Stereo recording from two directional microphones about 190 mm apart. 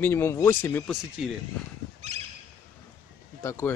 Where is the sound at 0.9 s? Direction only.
Centre (ahead or behind).